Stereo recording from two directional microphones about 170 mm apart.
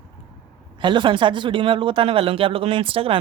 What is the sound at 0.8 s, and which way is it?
Speech, 30° right (ahead or behind).